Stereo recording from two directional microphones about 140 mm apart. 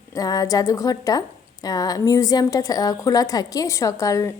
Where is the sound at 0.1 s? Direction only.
25° left (ahead or behind).